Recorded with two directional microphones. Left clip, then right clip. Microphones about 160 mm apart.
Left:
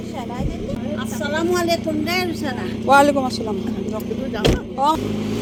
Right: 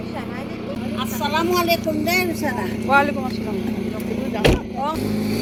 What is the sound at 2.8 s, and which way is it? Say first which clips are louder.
Speech: left 4 dB; 90° left.